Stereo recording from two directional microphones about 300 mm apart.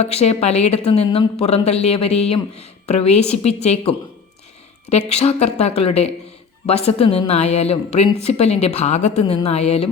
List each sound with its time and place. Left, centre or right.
0.0 s a woman's voice: left